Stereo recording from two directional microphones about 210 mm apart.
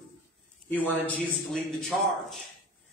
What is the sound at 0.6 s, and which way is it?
A man's voice, 10° left (ahead or behind).